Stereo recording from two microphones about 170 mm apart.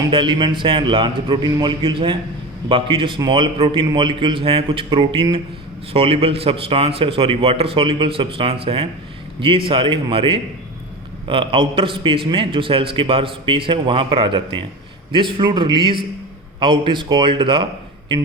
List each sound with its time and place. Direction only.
0.1 s a man's voice: 30° right (ahead or behind)